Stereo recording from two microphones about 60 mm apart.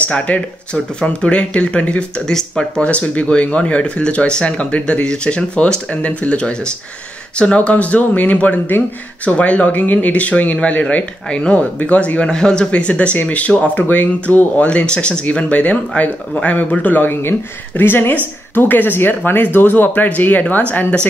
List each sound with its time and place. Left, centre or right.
0.3 s speech: left
2.8 s speech: left